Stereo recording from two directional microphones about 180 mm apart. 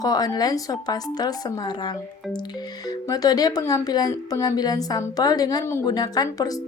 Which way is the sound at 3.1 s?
20° left (ahead or behind).